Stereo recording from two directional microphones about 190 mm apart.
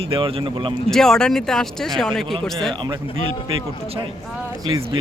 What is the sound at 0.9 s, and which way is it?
Speech, centre (ahead or behind).